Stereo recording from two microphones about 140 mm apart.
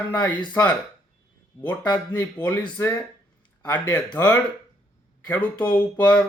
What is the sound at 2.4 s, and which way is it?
Speech, 10° left (ahead or behind).